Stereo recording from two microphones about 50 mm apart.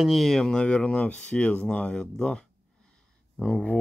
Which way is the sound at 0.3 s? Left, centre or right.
Centre.